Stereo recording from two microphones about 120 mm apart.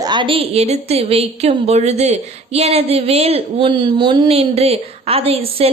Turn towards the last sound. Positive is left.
turn(degrees=-55)  # may be behind; listen again after turning